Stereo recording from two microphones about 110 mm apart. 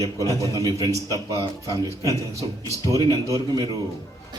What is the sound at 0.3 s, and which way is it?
A man's voice, 30° right (ahead or behind).